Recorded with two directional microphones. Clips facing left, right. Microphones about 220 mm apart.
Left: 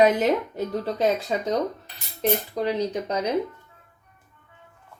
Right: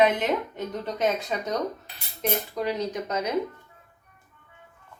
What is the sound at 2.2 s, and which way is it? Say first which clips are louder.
Speech: left 4 dB; 30° left (ahead or behind).